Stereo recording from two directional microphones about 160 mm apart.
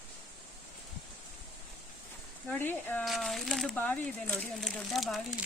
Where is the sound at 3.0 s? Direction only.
Centre (ahead or behind).